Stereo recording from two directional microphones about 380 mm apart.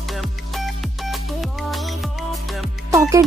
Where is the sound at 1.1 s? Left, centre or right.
Centre.